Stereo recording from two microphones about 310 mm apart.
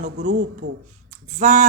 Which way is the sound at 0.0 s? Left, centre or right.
Right.